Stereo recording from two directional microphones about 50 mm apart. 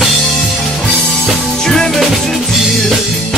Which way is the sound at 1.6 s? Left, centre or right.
Centre.